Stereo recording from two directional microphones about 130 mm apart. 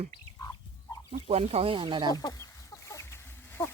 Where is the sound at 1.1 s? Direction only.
50° right (ahead or behind).